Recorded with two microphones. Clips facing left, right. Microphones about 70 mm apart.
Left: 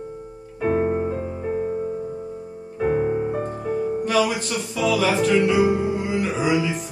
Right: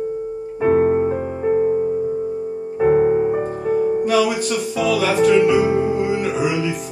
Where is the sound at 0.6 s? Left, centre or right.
Right.